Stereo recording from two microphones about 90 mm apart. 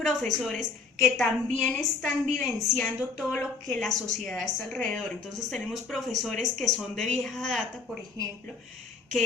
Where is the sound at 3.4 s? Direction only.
20° left (ahead or behind).